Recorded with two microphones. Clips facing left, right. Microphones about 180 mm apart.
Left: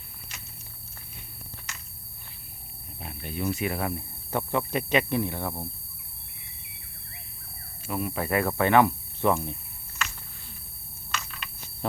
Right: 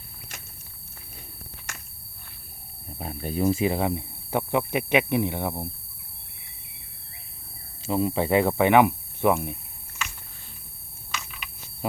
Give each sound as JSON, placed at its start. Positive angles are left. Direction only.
{"t": 0.3, "sound": "walk", "side_deg": -50}
{"t": 3.0, "sound": "speech", "side_deg": -40}
{"t": 3.5, "sound": "speech", "side_deg": -30}
{"t": 7.9, "sound": "speech", "side_deg": -25}
{"t": 11.1, "sound": "a sound", "side_deg": -10}